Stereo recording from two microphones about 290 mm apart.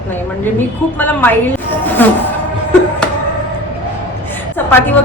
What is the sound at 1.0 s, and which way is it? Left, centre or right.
A woman's voice, centre.